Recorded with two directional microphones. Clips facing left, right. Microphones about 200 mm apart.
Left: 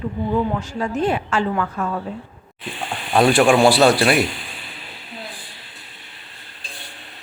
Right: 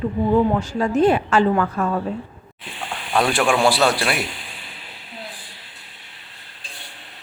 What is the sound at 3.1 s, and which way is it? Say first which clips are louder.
A man's voice: left 5 dB; 30° left (ahead or behind).